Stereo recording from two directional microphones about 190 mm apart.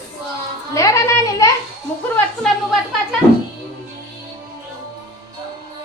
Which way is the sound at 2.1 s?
5° left (ahead or behind).